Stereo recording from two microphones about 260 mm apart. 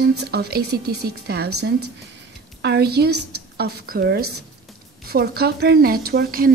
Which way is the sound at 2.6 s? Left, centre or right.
Right.